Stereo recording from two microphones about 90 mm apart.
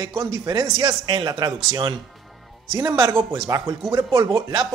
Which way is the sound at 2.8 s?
35° right (ahead or behind).